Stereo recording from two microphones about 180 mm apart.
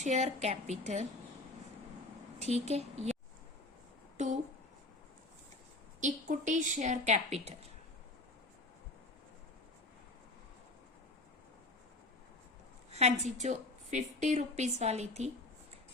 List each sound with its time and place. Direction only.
0.0 s a woman's voice: 40° right (ahead or behind)
2.4 s a woman's voice: 35° right (ahead or behind)
4.2 s a woman's voice: 40° right (ahead or behind)
6.0 s a woman's voice: 40° right (ahead or behind)
12.9 s a woman's voice: 35° right (ahead or behind)